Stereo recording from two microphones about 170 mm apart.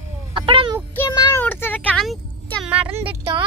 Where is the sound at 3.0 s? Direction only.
30° right (ahead or behind).